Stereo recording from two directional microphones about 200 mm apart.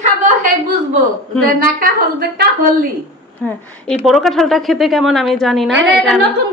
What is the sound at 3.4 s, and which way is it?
A woman's voice, 5° left (ahead or behind).